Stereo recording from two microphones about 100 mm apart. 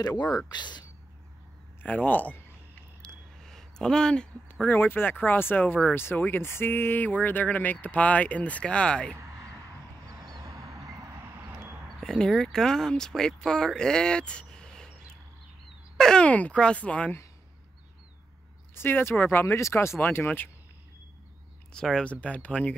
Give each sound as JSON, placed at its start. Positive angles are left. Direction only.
{"t": 0.5, "sound": "speech", "side_deg": 45}
{"t": 1.8, "sound": "speech", "side_deg": 15}
{"t": 3.3, "sound": "a sound", "side_deg": 5}
{"t": 4.6, "sound": "speech", "side_deg": 20}
{"t": 10.0, "sound": "a sound", "side_deg": -35}
{"t": 12.0, "sound": "speech", "side_deg": 5}
{"t": 16.0, "sound": "speech", "side_deg": 10}
{"t": 18.8, "sound": "speech", "side_deg": 20}
{"t": 21.7, "sound": "speech", "side_deg": 10}